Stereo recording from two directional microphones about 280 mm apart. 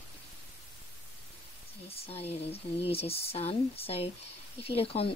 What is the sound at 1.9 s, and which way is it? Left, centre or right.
Speech, left.